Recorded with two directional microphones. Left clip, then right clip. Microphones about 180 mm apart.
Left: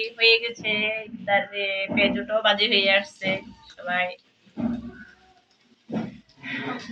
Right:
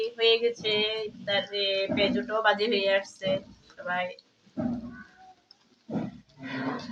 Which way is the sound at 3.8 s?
30° right (ahead or behind).